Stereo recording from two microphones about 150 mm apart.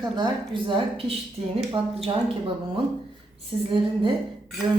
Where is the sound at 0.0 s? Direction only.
30° right (ahead or behind).